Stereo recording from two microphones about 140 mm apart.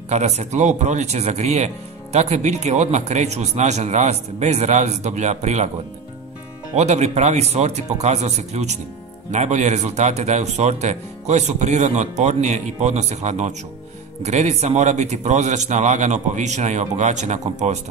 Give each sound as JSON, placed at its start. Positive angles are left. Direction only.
{"t": 0.1, "sound": "speech", "side_deg": -55}
{"t": 6.7, "sound": "speech", "side_deg": -55}